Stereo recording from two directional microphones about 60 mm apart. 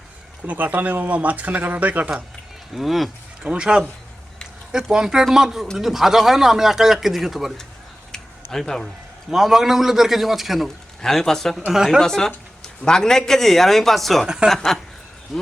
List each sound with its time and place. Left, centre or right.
0.4 s speech: right
2.7 s speech: centre
3.4 s speech: centre
8.5 s a woman's voice: centre
9.3 s speech: centre
11.9 s a woman's voice: centre
14.3 s speech: centre
14.5 s a woman's voice: centre